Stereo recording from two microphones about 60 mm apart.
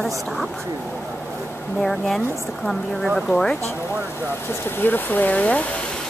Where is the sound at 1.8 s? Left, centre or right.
Centre.